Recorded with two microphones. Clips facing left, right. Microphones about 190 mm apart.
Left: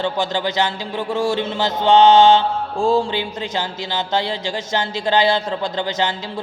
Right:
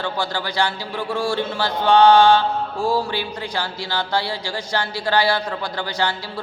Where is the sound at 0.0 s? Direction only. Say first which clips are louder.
Left 4 dB; 20° left (ahead or behind).